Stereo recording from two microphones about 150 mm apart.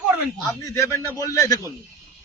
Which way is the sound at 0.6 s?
20° left (ahead or behind).